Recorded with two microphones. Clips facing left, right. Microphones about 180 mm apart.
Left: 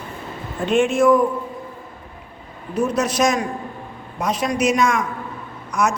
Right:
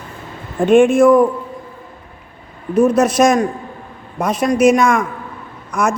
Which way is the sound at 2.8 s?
50° right (ahead or behind).